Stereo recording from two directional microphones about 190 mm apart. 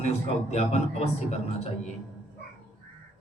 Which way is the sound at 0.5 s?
35° left (ahead or behind).